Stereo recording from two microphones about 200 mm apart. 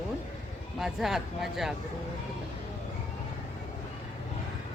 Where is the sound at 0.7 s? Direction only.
Centre (ahead or behind).